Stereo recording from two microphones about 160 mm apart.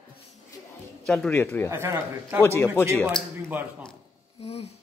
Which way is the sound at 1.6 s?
15° right (ahead or behind).